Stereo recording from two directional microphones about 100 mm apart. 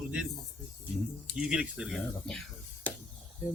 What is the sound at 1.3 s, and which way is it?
Speech, 10° right (ahead or behind).